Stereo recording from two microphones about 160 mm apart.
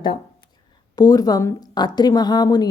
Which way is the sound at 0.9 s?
25° left (ahead or behind).